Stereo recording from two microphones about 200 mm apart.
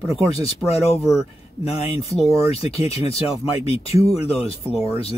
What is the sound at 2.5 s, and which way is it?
Speech, 30° left (ahead or behind).